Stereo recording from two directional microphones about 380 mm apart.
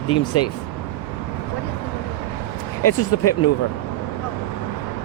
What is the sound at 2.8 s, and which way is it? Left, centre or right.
Speech, left.